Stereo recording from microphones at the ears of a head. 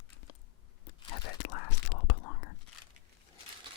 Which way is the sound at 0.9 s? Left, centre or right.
Left.